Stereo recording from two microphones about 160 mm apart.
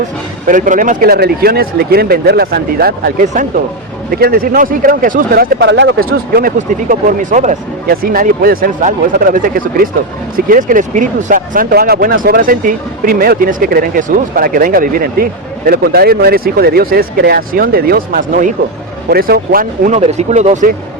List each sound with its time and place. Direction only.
0.4 s speech: 55° right (ahead or behind)
19.1 s speech: 70° right (ahead or behind)
20.0 s speech: 45° right (ahead or behind)